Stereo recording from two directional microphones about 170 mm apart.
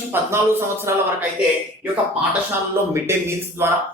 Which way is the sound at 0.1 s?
15° right (ahead or behind).